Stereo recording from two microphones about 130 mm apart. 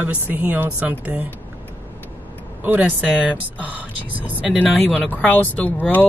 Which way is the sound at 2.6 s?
10° right (ahead or behind).